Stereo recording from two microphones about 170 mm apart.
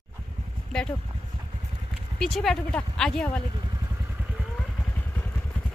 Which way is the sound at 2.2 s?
Centre (ahead or behind).